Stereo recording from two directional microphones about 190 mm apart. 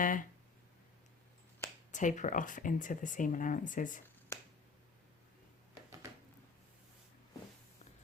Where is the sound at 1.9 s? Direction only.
40° left (ahead or behind).